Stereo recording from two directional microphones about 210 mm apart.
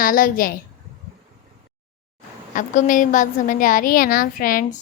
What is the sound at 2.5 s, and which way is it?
A woman's voice, 40° left (ahead or behind).